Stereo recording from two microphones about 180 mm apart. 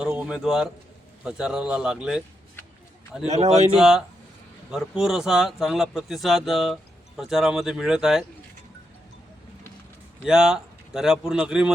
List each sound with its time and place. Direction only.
0.0 s speech: 5° right (ahead or behind)
3.2 s speech: 40° right (ahead or behind)
3.8 s speech: centre (ahead or behind)
10.2 s speech: 5° right (ahead or behind)